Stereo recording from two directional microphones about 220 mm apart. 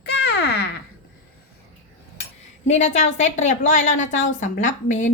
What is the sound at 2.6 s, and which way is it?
Speech, 30° left (ahead or behind).